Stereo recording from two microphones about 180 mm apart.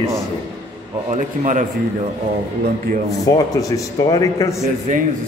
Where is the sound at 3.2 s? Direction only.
20° left (ahead or behind).